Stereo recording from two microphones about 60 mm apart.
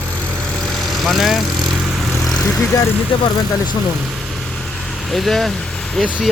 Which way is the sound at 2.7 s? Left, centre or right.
Left.